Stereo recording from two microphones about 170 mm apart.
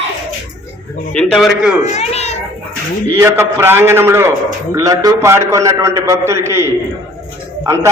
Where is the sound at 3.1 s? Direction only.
15° right (ahead or behind).